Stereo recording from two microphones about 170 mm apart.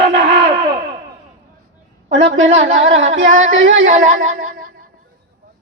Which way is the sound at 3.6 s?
55° right (ahead or behind).